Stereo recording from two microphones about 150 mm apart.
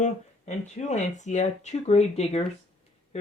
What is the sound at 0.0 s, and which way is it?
Speech, 50° left (ahead or behind).